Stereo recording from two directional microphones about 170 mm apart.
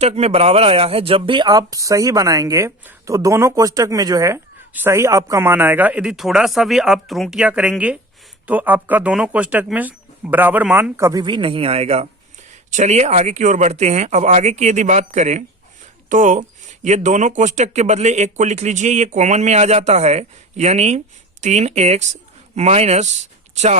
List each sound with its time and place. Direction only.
0.0 s speech: 40° right (ahead or behind)